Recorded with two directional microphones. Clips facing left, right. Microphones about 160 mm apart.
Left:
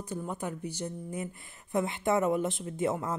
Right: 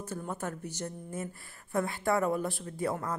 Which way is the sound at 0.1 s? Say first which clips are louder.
Left 2 dB; 10° left (ahead or behind).